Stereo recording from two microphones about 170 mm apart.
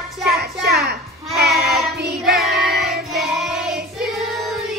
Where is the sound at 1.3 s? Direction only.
65° right (ahead or behind).